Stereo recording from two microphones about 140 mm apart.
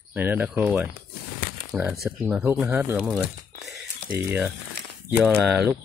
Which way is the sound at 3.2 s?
10° right (ahead or behind).